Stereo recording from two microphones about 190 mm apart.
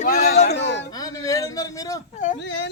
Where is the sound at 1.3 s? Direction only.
20° left (ahead or behind).